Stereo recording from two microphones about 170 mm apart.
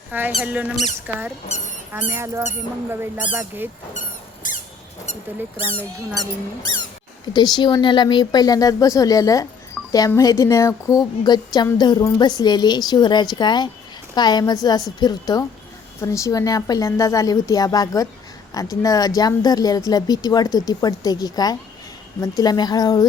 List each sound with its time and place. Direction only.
0.1 s speech: 10° right (ahead or behind)
4.4 s squeak: 50° left (ahead or behind)
5.5 s speech: 30° left (ahead or behind)
6.1 s speech: 30° right (ahead or behind)
7.3 s speech: 25° left (ahead or behind)
9.8 s music: centre (ahead or behind)
10.2 s speech: 20° left (ahead or behind)